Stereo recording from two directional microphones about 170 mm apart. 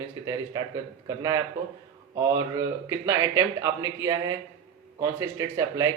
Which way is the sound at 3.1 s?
15° right (ahead or behind).